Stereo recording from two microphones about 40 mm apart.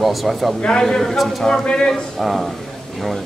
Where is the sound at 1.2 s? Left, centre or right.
Centre.